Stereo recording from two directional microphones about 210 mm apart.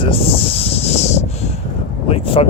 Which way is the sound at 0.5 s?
30° left (ahead or behind).